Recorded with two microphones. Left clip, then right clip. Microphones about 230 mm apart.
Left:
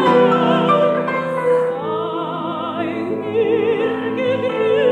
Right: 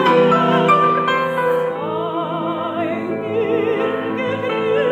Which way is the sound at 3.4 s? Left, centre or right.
Right.